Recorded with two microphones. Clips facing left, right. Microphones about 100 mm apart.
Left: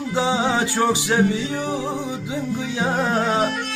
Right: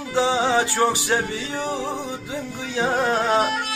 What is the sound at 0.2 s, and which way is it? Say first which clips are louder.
Music: right 1 dB; 15° left (ahead or behind).